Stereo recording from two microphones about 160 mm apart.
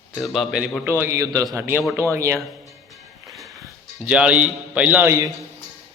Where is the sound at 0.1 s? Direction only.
Centre (ahead or behind).